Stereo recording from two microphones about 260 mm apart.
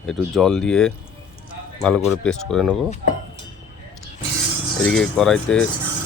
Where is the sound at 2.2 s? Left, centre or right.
Centre.